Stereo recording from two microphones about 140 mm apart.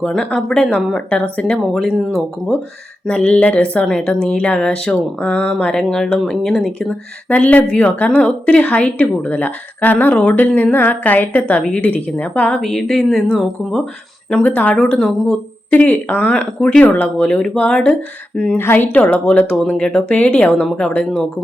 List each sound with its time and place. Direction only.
0.0 s a woman's voice: 5° left (ahead or behind)